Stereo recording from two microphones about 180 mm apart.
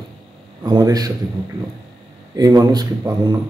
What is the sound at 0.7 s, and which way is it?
Speech, 20° right (ahead or behind).